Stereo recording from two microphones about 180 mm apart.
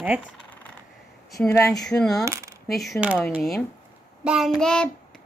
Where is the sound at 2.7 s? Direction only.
Centre (ahead or behind).